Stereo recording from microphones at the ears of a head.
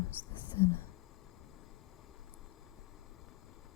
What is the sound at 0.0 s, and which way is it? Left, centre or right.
Whispering, left.